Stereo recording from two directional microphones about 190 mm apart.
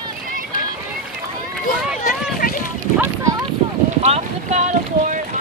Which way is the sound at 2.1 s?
50° left (ahead or behind).